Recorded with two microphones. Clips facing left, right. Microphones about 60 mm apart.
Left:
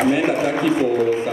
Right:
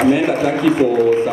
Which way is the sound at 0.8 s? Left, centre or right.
Right.